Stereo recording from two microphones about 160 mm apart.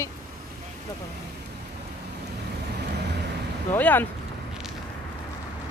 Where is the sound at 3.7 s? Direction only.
10° left (ahead or behind).